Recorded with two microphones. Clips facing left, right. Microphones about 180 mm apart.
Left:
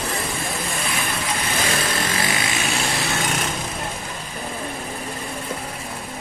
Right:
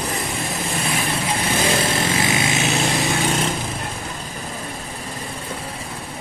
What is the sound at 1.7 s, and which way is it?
Lawn mower, 25° right (ahead or behind).